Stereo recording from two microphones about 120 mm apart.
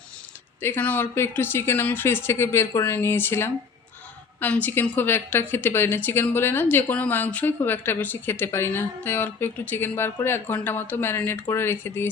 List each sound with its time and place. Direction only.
0.6 s a woman's voice: 15° left (ahead or behind)